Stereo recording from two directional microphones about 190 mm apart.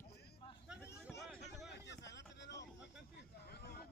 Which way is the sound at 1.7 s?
65° left (ahead or behind).